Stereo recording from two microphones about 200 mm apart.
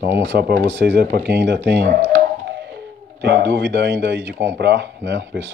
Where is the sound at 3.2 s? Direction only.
60° right (ahead or behind).